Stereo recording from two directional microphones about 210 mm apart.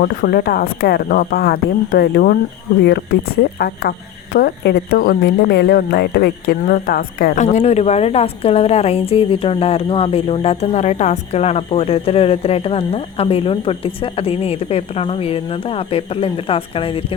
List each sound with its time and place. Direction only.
0.0 s speech: 45° left (ahead or behind)
4.4 s a woman's voice: 45° left (ahead or behind); by 17.2 s 25° left (ahead or behind)